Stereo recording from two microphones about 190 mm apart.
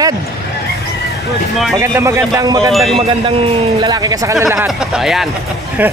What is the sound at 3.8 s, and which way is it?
Speech, 20° right (ahead or behind).